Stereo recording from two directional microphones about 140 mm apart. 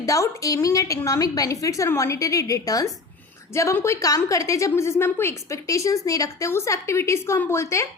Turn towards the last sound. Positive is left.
turn(degrees=20)  # may be behind; listen again after turning